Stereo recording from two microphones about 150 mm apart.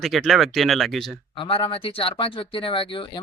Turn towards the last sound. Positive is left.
turn(degrees=35)  # may be behind; listen again after turning